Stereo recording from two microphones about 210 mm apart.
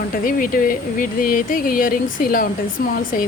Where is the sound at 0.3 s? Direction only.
45° left (ahead or behind).